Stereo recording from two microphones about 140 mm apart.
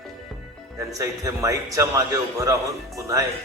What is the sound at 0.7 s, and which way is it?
A man's voice, 20° right (ahead or behind).